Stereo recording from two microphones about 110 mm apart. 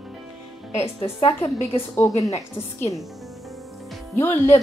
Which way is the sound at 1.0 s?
55° left (ahead or behind).